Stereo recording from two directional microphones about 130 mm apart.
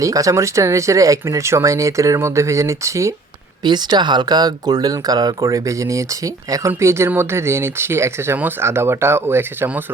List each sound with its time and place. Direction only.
0.0 s speech: 25° right (ahead or behind)
3.6 s speech: 35° right (ahead or behind); by 9.8 s 15° right (ahead or behind)